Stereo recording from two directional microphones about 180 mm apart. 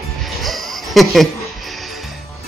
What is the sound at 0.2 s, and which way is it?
Music, centre (ahead or behind).